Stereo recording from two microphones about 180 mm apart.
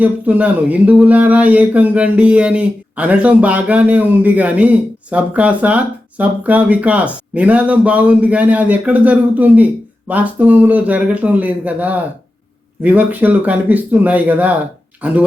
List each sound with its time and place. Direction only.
0.0 s speech: 10° right (ahead or behind)